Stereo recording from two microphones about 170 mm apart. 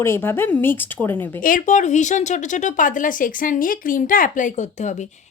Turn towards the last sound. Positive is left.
turn(degrees=45)  # may be behind; listen again after turning